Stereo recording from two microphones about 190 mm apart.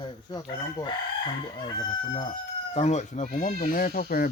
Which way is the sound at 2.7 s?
35° left (ahead or behind).